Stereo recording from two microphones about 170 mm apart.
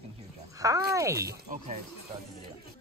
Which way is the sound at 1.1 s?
60° right (ahead or behind).